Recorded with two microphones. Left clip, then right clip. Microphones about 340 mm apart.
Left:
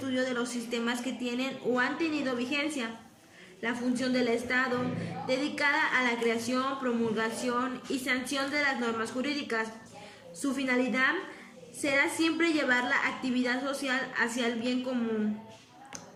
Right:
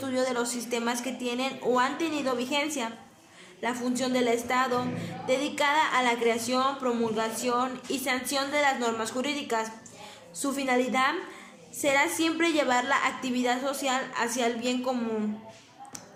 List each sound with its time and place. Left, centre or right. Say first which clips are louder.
0.1 s a woman's voice: right 3 dB; centre